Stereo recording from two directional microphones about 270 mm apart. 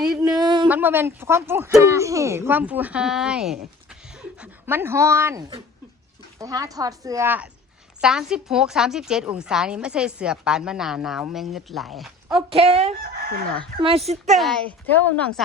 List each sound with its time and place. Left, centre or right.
0.1 s a sound: centre
0.6 s speech: centre
3.8 s a sound: centre
6.4 s a woman's voice: centre
12.4 s speech: right
14.3 s a woman's voice: centre